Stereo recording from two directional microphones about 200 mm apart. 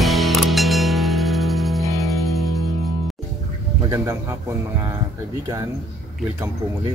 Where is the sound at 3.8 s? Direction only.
15° right (ahead or behind).